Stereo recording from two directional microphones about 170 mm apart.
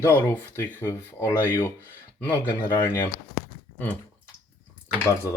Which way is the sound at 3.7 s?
10° left (ahead or behind).